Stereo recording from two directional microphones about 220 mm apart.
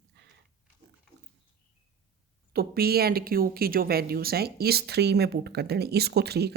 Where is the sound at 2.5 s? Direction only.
45° right (ahead or behind).